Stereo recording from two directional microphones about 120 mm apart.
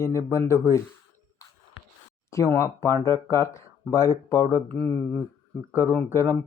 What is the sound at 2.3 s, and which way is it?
Speech, 25° left (ahead or behind).